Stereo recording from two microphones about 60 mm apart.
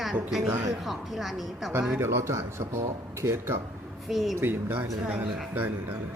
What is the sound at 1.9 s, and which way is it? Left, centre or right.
Speech, right.